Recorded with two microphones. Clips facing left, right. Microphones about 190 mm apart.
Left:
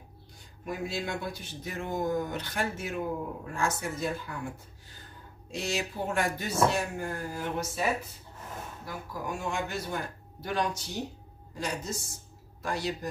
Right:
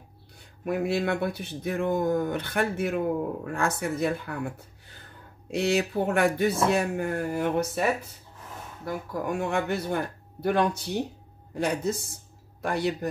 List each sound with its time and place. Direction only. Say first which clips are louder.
0.7 s speech: right 8 dB; 65° right (ahead or behind)
5.5 s speech: right 8 dB; 60° right (ahead or behind)
8.8 s speech: right 8 dB; 55° right (ahead or behind)